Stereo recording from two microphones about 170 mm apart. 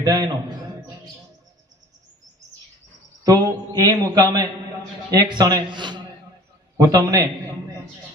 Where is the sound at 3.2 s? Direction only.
20° right (ahead or behind).